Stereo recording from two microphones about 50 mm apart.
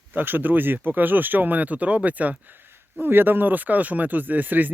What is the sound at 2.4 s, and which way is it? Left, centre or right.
Speech, right.